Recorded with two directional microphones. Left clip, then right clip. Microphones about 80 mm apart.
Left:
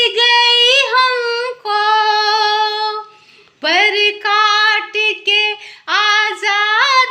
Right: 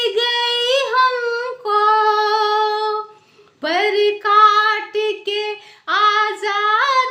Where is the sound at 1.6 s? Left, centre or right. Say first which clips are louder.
Left 1 dB; right.